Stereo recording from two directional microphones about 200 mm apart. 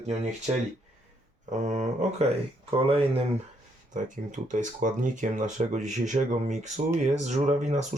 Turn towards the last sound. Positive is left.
turn(degrees=-35)  # may be behind; listen again after turning